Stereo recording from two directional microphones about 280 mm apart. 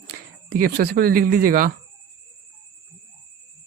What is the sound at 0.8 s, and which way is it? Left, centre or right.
Speech, right.